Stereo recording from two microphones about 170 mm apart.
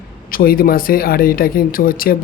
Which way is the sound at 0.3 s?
60° left (ahead or behind).